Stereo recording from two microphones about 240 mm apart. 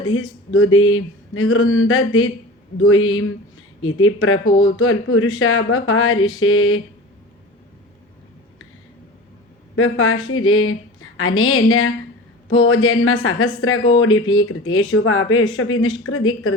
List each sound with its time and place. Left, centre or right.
0.0 s speech: left
9.7 s speech: left